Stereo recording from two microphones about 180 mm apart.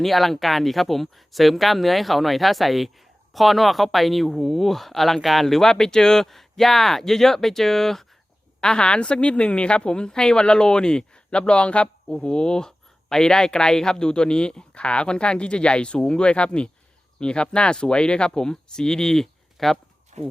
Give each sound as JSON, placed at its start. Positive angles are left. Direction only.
{"t": 0.0, "sound": "speech", "side_deg": 0}
{"t": 20.1, "sound": "speech", "side_deg": -40}